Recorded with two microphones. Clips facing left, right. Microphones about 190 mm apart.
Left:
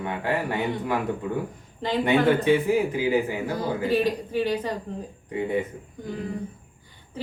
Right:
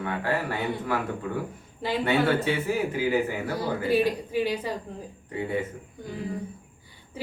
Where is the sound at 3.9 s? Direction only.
10° right (ahead or behind).